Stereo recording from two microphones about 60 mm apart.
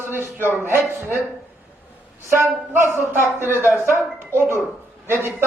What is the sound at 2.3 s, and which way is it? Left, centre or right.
Speech, right.